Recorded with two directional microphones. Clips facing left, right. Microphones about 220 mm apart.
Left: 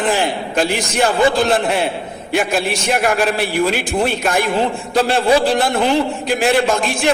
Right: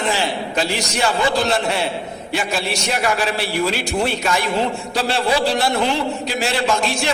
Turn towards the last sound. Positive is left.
turn(degrees=50)  # may be behind; listen again after turning